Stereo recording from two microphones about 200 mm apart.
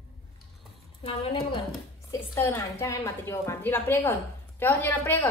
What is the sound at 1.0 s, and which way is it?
Speech, 25° left (ahead or behind).